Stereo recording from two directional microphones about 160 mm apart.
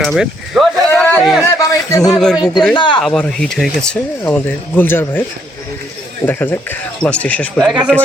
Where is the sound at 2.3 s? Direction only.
25° left (ahead or behind).